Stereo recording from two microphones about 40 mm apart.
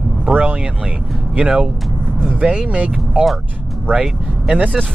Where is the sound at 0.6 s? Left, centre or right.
Right.